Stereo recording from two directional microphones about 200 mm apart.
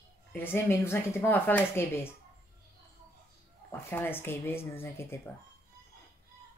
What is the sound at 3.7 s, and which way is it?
Speech, 10° left (ahead or behind).